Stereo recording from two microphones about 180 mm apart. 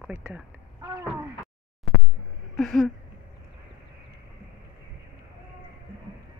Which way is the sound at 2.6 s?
5° left (ahead or behind).